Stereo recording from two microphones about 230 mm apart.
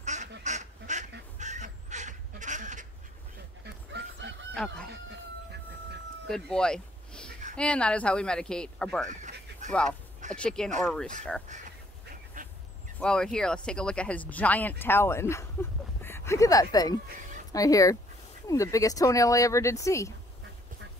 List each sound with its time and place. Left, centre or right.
0.0 s duck: right
1.4 s crow: right
3.6 s dog: right
6.2 s a sound: centre
7.5 s speech: centre
9.5 s a sound: right
10.3 s speech: centre
11.4 s goose: right
12.4 s duck: right
13.0 s speech: centre